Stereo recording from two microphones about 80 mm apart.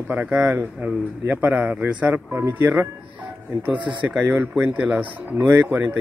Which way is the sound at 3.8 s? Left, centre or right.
Right.